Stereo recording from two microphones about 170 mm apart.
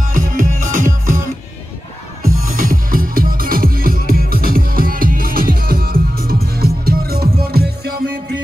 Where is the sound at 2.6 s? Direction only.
55° right (ahead or behind).